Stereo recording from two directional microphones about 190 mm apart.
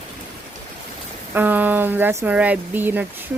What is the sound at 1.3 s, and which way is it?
Speech, 10° right (ahead or behind).